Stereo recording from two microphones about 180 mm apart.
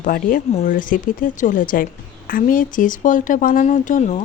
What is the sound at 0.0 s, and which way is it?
Speech, 50° left (ahead or behind).